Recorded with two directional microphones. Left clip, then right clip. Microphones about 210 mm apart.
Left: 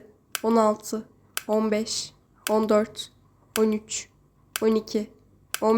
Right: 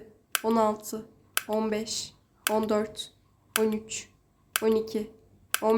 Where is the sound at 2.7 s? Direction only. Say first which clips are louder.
Left 6 dB; 15° left (ahead or behind).